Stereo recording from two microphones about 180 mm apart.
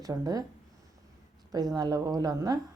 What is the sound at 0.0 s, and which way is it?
Speech, 20° right (ahead or behind).